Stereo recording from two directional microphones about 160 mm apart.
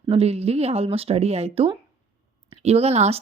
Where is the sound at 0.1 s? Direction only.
40° right (ahead or behind).